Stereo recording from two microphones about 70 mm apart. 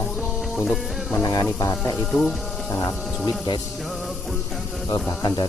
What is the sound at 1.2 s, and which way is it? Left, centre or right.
Speech, left.